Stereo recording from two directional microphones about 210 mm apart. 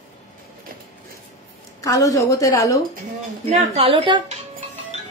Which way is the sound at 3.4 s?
30° right (ahead or behind).